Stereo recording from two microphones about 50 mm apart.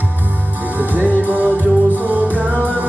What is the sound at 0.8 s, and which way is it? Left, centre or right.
Music, right.